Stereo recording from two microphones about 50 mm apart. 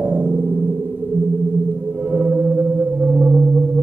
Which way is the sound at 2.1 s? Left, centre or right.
Right.